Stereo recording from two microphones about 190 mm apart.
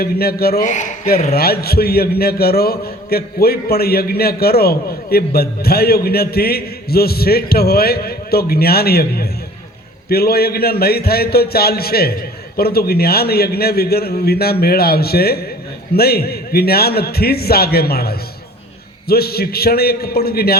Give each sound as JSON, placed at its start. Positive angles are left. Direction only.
{"t": 0.0, "sound": "a man's voice", "side_deg": 55}
{"t": 0.7, "sound": "a man's voice", "side_deg": 40}